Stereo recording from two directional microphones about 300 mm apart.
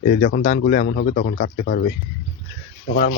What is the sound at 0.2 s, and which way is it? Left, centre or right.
Speech, left.